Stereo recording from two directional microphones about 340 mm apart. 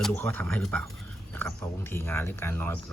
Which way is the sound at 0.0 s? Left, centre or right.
Centre.